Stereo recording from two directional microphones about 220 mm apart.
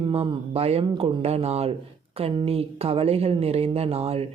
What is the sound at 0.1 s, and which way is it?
Speech, 25° right (ahead or behind).